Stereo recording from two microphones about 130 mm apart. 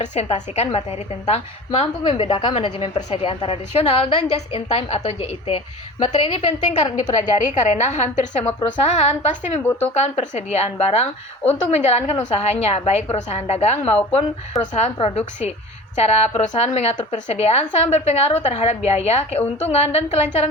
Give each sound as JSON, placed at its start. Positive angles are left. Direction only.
{"t": 0.0, "sound": "a woman's voice", "side_deg": 60}
{"t": 6.7, "sound": "a woman's voice", "side_deg": 65}
{"t": 14.5, "sound": "a woman's voice", "side_deg": 0}
{"t": 14.9, "sound": "a woman's voice", "side_deg": 50}